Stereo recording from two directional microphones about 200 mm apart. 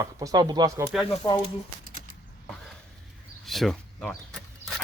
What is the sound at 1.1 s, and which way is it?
Speech, 20° left (ahead or behind).